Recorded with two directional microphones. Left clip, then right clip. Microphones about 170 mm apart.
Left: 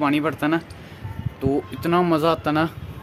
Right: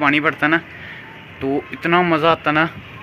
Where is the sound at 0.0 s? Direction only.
10° left (ahead or behind).